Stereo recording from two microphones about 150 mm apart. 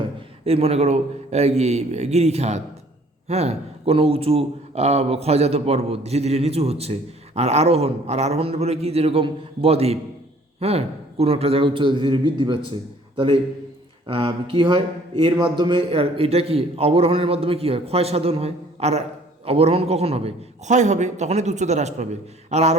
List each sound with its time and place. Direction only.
0.4 s a man's voice: 40° right (ahead or behind)